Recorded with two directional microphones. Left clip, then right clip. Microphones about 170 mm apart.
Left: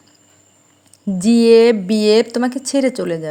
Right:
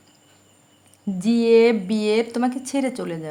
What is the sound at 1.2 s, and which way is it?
Speech, 30° left (ahead or behind).